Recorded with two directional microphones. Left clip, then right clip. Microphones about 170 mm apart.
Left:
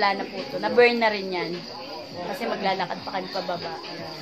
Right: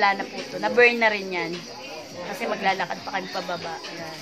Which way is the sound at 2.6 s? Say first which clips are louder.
Right 3 dB; 15° right (ahead or behind).